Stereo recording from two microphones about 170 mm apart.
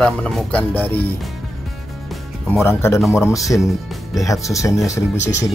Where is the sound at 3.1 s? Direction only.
15° left (ahead or behind).